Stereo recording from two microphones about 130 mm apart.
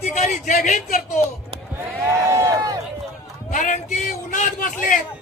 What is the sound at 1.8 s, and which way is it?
Speech, 20° right (ahead or behind).